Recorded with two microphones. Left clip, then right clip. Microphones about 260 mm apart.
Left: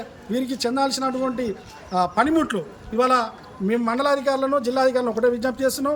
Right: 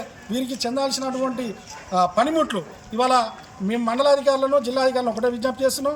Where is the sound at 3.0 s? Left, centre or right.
Left.